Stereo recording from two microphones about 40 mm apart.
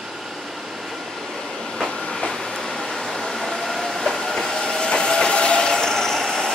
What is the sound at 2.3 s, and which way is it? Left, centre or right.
Train, centre.